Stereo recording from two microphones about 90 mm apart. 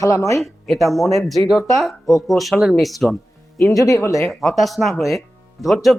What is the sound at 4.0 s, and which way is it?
Speech, 35° left (ahead or behind).